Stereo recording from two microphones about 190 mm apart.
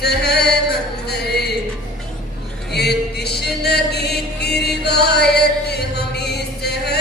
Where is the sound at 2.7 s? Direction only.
60° left (ahead or behind).